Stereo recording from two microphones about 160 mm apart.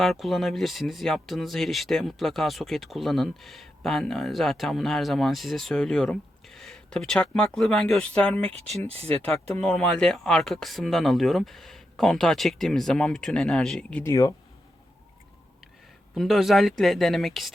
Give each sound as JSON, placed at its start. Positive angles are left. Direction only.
{"t": 0.0, "sound": "speech", "side_deg": 0}
{"t": 8.5, "sound": "speech", "side_deg": -40}
{"t": 9.5, "sound": "speech", "side_deg": 5}
{"t": 14.0, "sound": "speech", "side_deg": 20}
{"t": 16.1, "sound": "speech", "side_deg": 0}